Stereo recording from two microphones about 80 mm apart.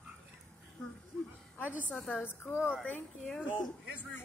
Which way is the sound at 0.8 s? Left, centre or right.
Centre.